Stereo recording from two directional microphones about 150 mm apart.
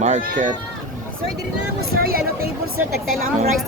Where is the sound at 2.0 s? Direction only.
80° right.